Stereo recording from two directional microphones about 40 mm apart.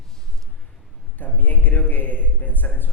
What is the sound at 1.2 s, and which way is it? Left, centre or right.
A man's voice, left.